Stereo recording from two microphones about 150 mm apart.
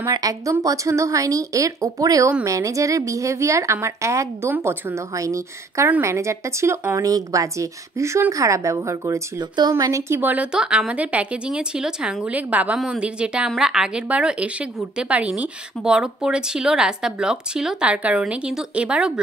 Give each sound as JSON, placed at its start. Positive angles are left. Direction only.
{"t": 0.1, "sound": "speech", "side_deg": -25}